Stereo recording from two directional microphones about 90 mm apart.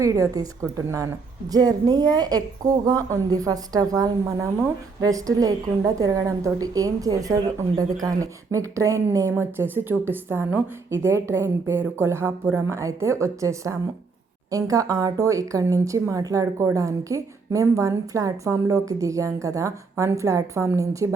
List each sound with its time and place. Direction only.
0.0 s a woman's voice: 40° right (ahead or behind)
1.5 s a woman's voice: 45° right (ahead or behind)
9.3 s a woman's voice: 25° right (ahead or behind)